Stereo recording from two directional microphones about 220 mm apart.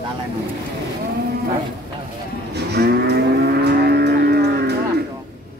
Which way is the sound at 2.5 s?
50° right (ahead or behind).